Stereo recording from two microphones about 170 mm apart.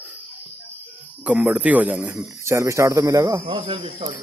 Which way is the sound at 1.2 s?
10° right (ahead or behind).